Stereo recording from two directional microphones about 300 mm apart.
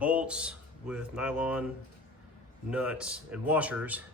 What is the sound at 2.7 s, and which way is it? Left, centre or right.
Speech, centre.